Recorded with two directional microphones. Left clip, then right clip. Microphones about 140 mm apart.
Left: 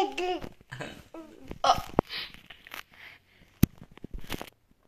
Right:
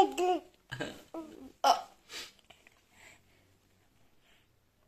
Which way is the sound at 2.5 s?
30° right (ahead or behind).